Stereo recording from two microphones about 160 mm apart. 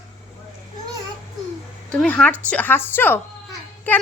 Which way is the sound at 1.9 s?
5° left (ahead or behind).